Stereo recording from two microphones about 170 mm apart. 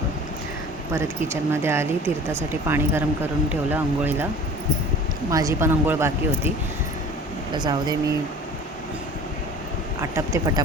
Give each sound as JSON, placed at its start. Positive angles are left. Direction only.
{"t": 0.9, "sound": "speech", "side_deg": -15}
{"t": 5.3, "sound": "speech", "side_deg": -20}
{"t": 7.5, "sound": "speech", "side_deg": -25}
{"t": 10.0, "sound": "speech", "side_deg": -20}